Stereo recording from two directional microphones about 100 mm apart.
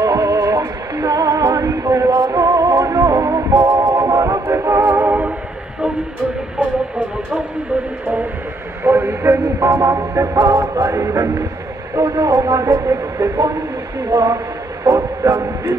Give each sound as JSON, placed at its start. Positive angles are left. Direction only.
{"t": 0.0, "sound": "music", "side_deg": -35}
{"t": 3.5, "sound": "music", "side_deg": -50}
{"t": 3.9, "sound": "music", "side_deg": -30}
{"t": 8.8, "sound": "speech", "side_deg": -25}
{"t": 10.5, "sound": "music", "side_deg": -30}
{"t": 11.9, "sound": "speech", "side_deg": -30}
{"t": 14.9, "sound": "a sound", "side_deg": -30}